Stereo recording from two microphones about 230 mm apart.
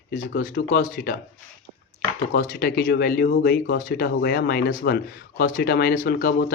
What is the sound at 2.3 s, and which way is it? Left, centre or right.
Speech, left.